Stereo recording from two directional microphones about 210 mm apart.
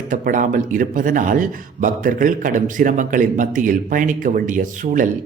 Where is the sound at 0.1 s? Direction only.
40° right (ahead or behind).